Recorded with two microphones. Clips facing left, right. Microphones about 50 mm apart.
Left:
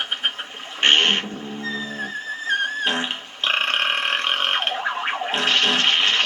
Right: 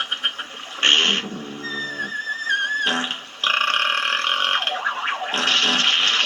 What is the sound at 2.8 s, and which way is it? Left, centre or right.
Burping, centre.